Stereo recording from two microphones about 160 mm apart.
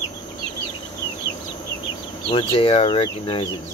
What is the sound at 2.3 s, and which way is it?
Speech, 35° left (ahead or behind).